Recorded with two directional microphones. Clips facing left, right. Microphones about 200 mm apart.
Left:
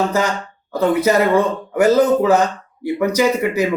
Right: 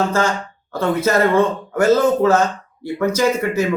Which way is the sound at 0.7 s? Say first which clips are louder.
Left 2 dB; 15° left (ahead or behind).